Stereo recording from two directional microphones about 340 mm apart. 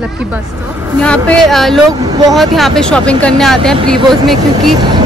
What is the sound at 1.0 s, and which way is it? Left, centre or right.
Speech, centre.